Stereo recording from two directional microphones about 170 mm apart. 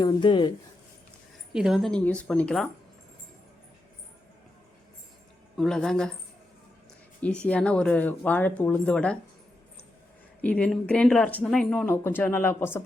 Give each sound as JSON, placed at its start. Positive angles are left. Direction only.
{"t": 0.0, "sound": "speech", "side_deg": 25}
{"t": 1.5, "sound": "a woman's voice", "side_deg": -5}
{"t": 5.5, "sound": "a woman's voice", "side_deg": 5}
{"t": 7.2, "sound": "speech", "side_deg": 5}
{"t": 10.4, "sound": "speech", "side_deg": 5}